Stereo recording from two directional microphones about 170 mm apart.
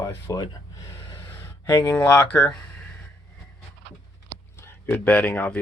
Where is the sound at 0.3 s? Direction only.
20° left (ahead or behind).